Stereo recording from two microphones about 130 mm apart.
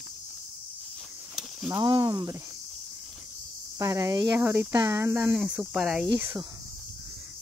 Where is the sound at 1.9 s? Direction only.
35° right (ahead or behind).